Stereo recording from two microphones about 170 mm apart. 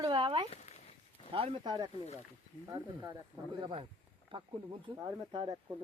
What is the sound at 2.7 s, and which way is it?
Speech, 20° right (ahead or behind).